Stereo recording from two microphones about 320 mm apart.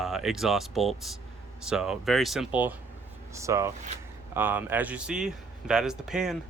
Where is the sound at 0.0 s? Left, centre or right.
Centre.